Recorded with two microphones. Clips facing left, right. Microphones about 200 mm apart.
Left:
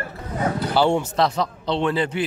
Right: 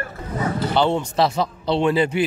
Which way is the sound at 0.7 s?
10° left (ahead or behind).